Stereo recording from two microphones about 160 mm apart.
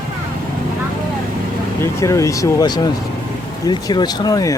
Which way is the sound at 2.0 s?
20° left (ahead or behind).